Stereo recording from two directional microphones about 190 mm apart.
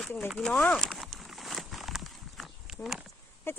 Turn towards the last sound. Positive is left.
turn(degrees=10)  # may be behind; listen again after turning